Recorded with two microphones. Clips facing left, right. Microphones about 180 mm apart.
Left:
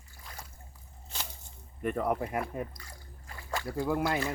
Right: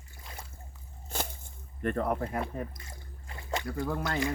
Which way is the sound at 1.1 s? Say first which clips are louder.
Right 7 dB; 50° right (ahead or behind).